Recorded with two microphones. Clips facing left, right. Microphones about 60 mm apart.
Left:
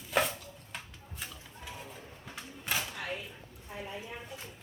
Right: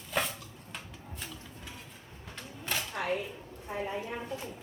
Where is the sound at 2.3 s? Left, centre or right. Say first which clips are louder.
Even; centre.